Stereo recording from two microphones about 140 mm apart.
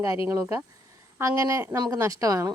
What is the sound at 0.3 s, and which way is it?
Speech, 20° right (ahead or behind).